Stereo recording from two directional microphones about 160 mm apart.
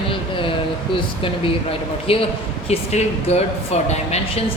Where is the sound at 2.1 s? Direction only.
35° left (ahead or behind).